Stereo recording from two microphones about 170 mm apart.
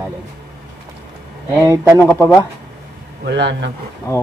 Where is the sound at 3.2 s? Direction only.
90° right.